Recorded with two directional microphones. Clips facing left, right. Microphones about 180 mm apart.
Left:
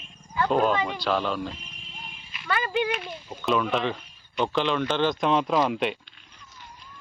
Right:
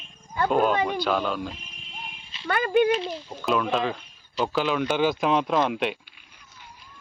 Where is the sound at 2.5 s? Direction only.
50° right (ahead or behind).